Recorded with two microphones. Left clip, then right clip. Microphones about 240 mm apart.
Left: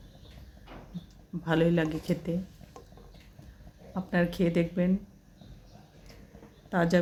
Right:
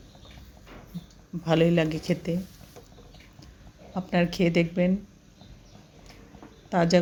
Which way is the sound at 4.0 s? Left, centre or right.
Centre.